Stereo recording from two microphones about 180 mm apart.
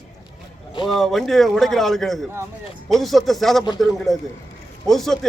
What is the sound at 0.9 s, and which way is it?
A man's voice, centre (ahead or behind).